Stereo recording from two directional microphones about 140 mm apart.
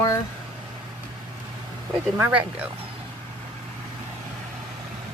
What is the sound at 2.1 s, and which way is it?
Speech, 10° right (ahead or behind).